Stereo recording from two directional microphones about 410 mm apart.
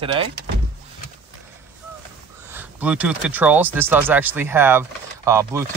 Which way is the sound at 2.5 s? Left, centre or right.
Centre.